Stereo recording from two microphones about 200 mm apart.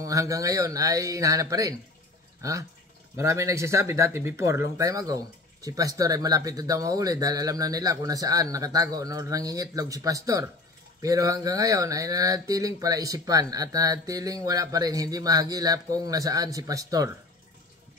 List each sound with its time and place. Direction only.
0.0 s speech: 15° right (ahead or behind)
3.2 s speech: 15° right (ahead or behind)